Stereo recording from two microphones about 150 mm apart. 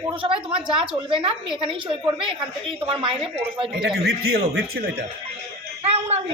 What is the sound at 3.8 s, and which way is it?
Speech, 90° right.